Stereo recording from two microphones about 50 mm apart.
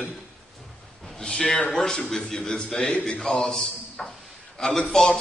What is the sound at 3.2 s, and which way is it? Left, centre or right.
A man's voice, centre.